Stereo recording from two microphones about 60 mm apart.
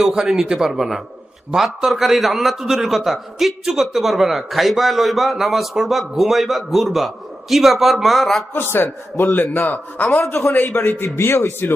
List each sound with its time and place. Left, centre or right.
0.0 s a man's voice: centre
8.5 s a man's voice: left
10.2 s a man's voice: left